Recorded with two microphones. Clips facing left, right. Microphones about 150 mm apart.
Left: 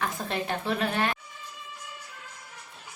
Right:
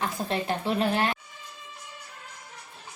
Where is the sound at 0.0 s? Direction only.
30° right (ahead or behind).